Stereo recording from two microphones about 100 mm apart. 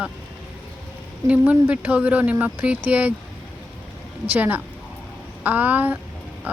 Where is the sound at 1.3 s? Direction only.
15° right (ahead or behind).